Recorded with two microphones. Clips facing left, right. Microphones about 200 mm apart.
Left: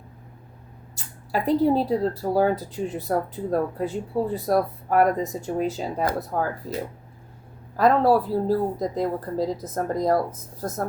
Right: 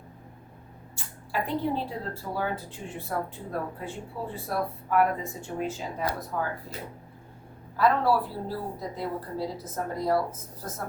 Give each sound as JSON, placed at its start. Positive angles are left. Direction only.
{"t": 0.9, "sound": "speech", "side_deg": 40}